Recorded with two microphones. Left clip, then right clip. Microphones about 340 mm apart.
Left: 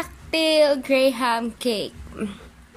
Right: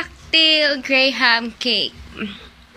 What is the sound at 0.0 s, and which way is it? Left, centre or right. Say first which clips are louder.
Speech: right 7 dB; centre.